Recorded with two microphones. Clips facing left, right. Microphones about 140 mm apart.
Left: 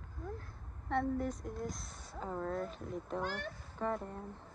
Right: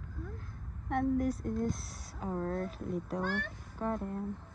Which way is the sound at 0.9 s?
15° right (ahead or behind).